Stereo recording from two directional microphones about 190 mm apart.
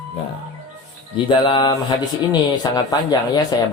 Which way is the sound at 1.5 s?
20° left (ahead or behind).